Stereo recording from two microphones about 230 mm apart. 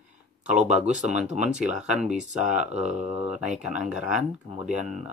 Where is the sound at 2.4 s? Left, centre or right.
Right.